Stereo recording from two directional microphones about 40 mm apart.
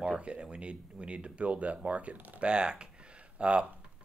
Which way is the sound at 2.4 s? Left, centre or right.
Right.